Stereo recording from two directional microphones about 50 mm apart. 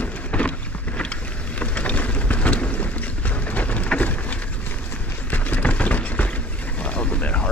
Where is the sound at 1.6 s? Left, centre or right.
Left.